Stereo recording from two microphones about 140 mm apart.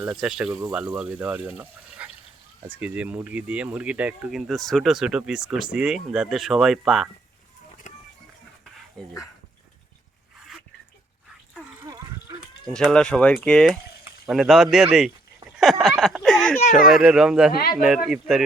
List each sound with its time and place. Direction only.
0.0 s speech: 5° right (ahead or behind)
7.9 s a sound: 55° left (ahead or behind)
9.0 s speech: 5° left (ahead or behind)
12.6 s speech: 5° left (ahead or behind)
15.4 s a sound: centre (ahead or behind)
16.7 s speech: centre (ahead or behind)
17.5 s speech: 90° left
17.7 s speech: 5° right (ahead or behind)